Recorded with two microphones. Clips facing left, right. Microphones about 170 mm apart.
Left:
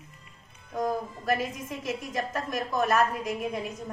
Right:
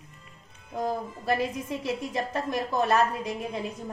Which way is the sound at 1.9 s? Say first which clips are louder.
Even; 30° right (ahead or behind).